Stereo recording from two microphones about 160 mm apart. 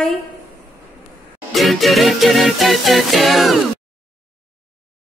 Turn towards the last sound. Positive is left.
turn(degrees=0)  # may be behind; listen again after turning